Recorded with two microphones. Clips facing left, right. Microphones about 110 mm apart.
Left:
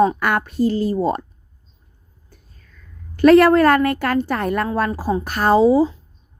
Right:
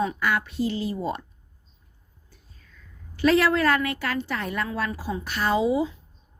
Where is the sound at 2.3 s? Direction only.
50° left (ahead or behind); by 5.9 s 35° left (ahead or behind).